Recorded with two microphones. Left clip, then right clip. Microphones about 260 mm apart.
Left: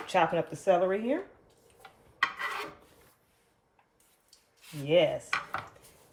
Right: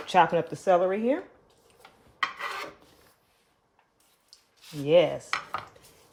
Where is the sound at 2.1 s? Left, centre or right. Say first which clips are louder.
Even; centre.